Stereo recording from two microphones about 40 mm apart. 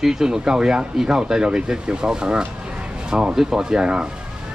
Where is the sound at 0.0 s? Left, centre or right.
Centre.